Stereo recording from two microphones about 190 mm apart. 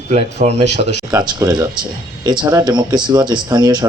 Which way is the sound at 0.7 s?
65° left (ahead or behind).